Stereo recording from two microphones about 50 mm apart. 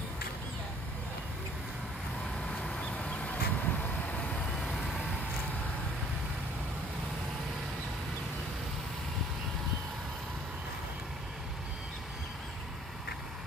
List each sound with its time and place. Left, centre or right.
2.4 s vehicle: centre
2.9 s a sound: left
4.1 s vehicle: left
4.6 s vehicle: centre